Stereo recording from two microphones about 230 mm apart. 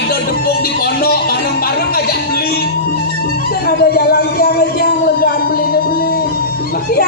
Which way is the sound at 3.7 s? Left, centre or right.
Left.